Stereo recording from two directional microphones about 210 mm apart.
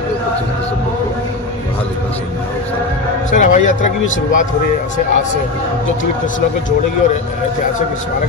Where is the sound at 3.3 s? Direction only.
35° left (ahead or behind).